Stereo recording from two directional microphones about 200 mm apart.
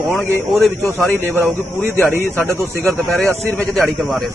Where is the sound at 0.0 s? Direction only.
Centre (ahead or behind).